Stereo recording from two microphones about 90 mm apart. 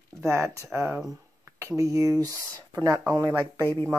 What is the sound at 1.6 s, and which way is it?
Speech, 35° right (ahead or behind).